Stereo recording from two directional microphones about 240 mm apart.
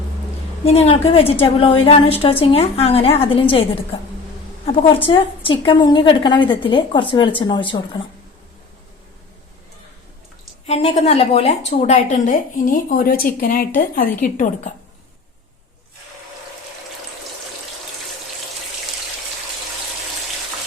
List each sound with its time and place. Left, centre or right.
0.6 s a woman's voice: left
5.0 s a woman's voice: left
10.7 s a woman's voice: left